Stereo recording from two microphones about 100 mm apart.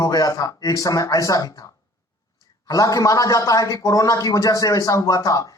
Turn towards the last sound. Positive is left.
turn(degrees=35)  # may be behind; listen again after turning